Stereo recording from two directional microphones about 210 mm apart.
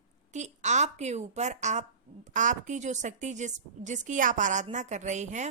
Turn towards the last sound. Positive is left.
turn(degrees=-35)  # may be behind; listen again after turning